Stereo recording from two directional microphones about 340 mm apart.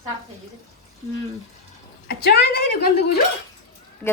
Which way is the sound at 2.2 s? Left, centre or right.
Left.